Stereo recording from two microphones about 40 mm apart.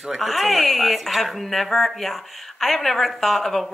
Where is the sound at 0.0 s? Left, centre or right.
Centre.